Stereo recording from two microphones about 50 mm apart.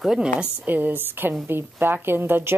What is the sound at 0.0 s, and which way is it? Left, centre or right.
Speech, centre.